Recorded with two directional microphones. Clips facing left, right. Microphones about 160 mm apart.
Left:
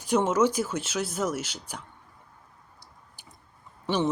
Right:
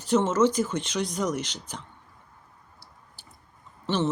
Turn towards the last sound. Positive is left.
turn(degrees=10)  # may be behind; listen again after turning